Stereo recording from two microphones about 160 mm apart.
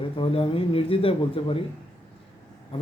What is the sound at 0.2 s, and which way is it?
Speech, 35° left (ahead or behind).